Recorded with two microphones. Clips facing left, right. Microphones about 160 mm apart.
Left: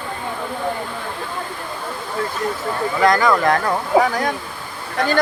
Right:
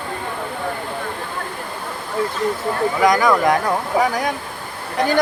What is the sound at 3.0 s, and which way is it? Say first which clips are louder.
Speech: even; 10° right (ahead or behind).